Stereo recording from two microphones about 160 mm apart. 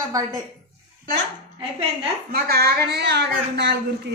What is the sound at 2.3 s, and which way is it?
A woman's voice, 75° right (ahead or behind).